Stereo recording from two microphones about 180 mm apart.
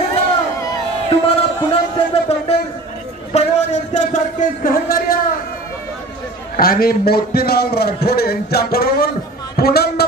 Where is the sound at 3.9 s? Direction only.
45° left (ahead or behind).